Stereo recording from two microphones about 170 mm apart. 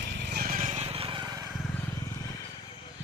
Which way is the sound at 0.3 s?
60° right (ahead or behind).